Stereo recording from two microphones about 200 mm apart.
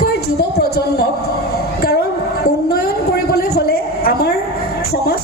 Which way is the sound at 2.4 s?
50° left (ahead or behind).